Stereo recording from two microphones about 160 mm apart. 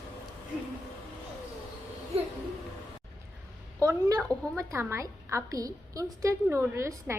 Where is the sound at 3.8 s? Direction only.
20° right (ahead or behind).